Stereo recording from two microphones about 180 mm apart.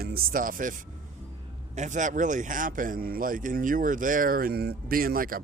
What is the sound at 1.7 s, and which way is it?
Speech, 45° right (ahead or behind).